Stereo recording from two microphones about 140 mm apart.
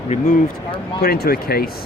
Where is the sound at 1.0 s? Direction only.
90° left.